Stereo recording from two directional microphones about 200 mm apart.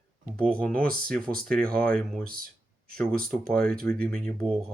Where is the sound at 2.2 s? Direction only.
45° right (ahead or behind).